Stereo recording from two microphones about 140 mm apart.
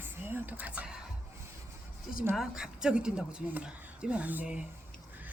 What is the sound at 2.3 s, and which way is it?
A woman's voice, 5° right (ahead or behind).